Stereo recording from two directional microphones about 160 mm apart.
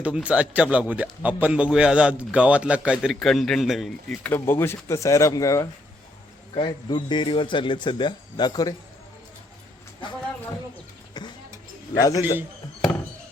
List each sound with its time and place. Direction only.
0.0 s speech: 10° right (ahead or behind)
4.3 s a man's voice: 15° left (ahead or behind)
6.5 s a man's voice: 30° left (ahead or behind)
11.9 s a man's voice: 20° left (ahead or behind)